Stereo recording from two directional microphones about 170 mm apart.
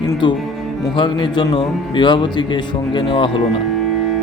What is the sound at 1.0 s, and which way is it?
Speech, 25° left (ahead or behind).